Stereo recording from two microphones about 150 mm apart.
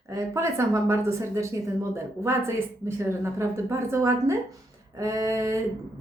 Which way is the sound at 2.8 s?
20° right (ahead or behind).